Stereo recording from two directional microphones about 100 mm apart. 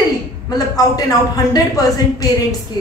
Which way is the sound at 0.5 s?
40° left (ahead or behind).